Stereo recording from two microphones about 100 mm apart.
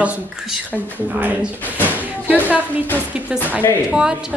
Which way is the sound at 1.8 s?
15° right (ahead or behind).